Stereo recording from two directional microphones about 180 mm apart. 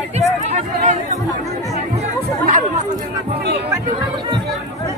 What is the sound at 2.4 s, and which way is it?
Chatter, 40° right (ahead or behind).